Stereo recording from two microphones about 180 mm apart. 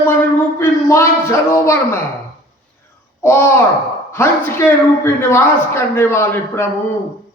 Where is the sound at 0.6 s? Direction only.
15° left (ahead or behind).